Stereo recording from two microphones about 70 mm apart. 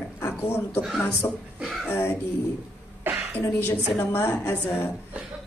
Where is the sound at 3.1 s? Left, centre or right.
Right.